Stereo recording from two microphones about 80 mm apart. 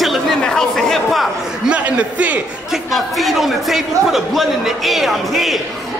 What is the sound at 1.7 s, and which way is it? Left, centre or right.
Speech, centre.